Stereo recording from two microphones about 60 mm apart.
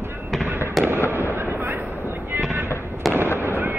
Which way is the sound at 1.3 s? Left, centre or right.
Right.